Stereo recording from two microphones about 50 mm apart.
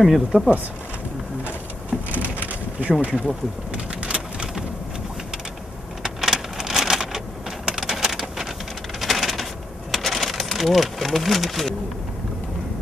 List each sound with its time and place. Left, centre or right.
0.0 s speech: centre
2.0 s crushing: right
3.0 s speech: right
3.7 s a sound: centre
6.0 s a sound: centre
9.0 s coin: centre